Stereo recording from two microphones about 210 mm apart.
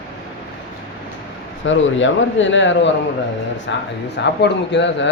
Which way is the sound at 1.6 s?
65° left (ahead or behind).